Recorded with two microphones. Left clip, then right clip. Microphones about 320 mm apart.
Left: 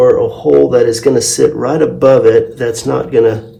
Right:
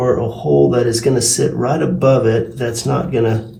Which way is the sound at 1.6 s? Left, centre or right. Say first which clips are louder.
Left 3 dB; left.